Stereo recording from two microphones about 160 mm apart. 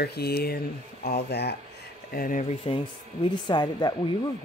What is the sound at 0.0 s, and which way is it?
Speech, 80° left.